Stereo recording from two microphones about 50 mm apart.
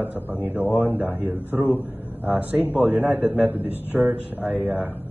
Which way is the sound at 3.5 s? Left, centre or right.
Right.